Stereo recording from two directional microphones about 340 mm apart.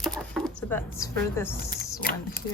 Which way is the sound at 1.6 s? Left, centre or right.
Left.